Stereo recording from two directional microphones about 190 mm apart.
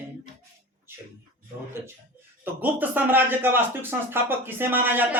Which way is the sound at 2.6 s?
10° right (ahead or behind).